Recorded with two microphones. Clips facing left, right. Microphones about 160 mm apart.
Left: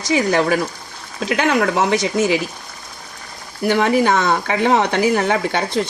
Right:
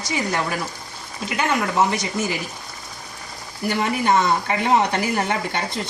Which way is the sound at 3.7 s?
85° left.